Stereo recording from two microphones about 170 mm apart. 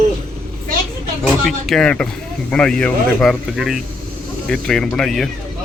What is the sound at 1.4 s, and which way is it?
Speech, centre (ahead or behind).